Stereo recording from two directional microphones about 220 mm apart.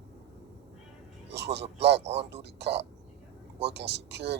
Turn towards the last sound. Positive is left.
turn(degrees=-50)  # may be behind; listen again after turning